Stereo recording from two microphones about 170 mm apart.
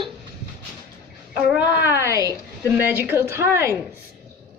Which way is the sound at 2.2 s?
20° left (ahead or behind).